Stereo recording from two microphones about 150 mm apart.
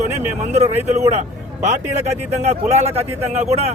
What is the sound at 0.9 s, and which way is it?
Speech, 50° right (ahead or behind).